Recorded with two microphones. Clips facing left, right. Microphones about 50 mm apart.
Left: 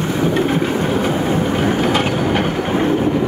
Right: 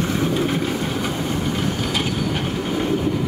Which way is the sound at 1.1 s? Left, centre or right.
Left.